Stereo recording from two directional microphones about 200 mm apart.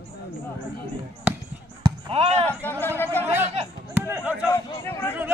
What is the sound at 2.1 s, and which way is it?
Speech, 30° right (ahead or behind).